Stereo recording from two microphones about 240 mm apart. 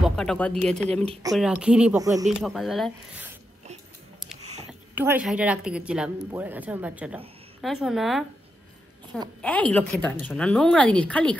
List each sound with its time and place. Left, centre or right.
0.0 s speech: centre
1.0 s speech: right
1.3 s a woman's voice: centre
2.2 s a woman's voice: centre
4.9 s a woman's voice: centre
9.4 s a woman's voice: centre